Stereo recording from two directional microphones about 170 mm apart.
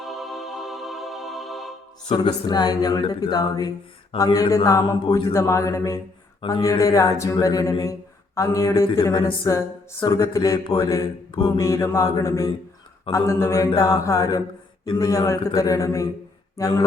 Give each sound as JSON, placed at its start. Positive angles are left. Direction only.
{"t": 0.0, "sound": "music", "side_deg": 0}
{"t": 2.1, "sound": "speech", "side_deg": 25}
{"t": 5.3, "sound": "mantra", "side_deg": 15}
{"t": 6.5, "sound": "speech", "side_deg": 20}
{"t": 8.4, "sound": "mantra", "side_deg": 20}
{"t": 10.1, "sound": "speech", "side_deg": 20}
{"t": 11.3, "sound": "mantra", "side_deg": 30}
{"t": 11.6, "sound": "mantra", "side_deg": 15}
{"t": 13.7, "sound": "speech", "side_deg": 20}